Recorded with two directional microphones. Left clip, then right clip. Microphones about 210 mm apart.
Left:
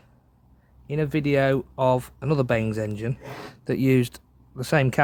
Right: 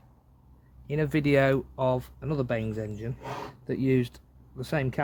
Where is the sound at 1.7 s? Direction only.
25° left (ahead or behind).